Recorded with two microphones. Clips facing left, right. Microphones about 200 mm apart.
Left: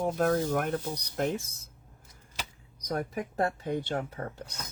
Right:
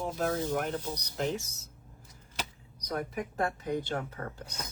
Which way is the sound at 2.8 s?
40° left (ahead or behind).